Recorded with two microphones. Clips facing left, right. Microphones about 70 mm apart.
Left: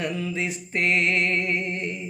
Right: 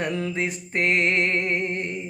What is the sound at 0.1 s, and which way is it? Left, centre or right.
Music, right.